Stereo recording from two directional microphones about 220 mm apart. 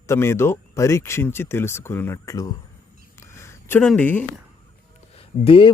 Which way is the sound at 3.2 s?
10° left (ahead or behind).